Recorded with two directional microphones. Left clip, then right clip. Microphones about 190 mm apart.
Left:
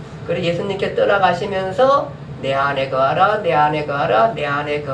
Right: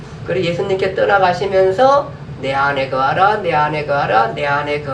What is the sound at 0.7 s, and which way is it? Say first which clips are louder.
Speech: right 3 dB; 50° right (ahead or behind).